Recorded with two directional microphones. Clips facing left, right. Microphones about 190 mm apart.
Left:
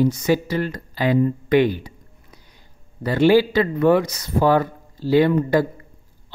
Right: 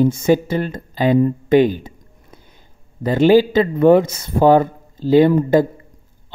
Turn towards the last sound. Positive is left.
turn(degrees=-25)  # may be behind; listen again after turning